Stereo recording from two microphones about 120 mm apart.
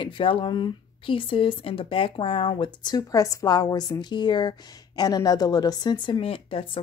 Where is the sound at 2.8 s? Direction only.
30° left (ahead or behind); by 6.6 s 50° left (ahead or behind).